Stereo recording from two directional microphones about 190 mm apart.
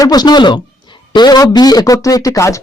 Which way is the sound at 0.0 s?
20° left (ahead or behind).